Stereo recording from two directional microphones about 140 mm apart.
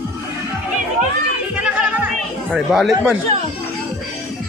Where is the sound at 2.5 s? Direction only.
Centre (ahead or behind).